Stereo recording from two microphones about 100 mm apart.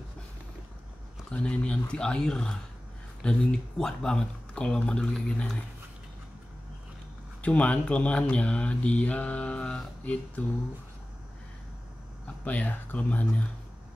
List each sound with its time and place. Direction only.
1.3 s speech: 10° left (ahead or behind)
7.4 s speech: 15° left (ahead or behind)
12.4 s speech: 15° left (ahead or behind)